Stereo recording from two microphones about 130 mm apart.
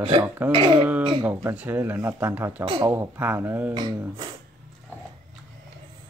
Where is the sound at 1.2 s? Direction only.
15° right (ahead or behind).